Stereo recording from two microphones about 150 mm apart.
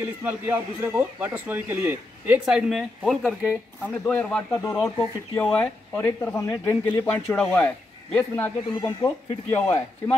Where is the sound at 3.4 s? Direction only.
15° left (ahead or behind).